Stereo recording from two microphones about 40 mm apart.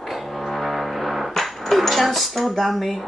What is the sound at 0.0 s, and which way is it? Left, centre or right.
Music, centre.